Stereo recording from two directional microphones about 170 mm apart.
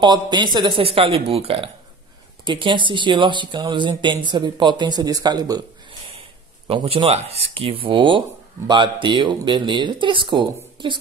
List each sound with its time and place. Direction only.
0.0 s speech: 25° right (ahead or behind)